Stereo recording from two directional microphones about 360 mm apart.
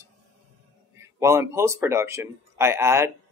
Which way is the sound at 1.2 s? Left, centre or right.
Centre.